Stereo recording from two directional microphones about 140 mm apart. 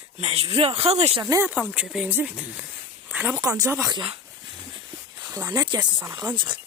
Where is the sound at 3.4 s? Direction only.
25° right (ahead or behind).